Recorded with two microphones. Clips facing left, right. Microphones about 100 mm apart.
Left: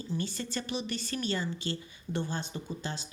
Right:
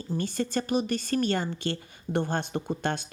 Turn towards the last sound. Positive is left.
turn(degrees=-60)  # may be behind; listen again after turning